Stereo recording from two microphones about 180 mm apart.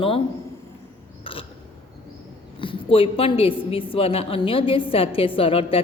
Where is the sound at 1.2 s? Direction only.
30° left (ahead or behind).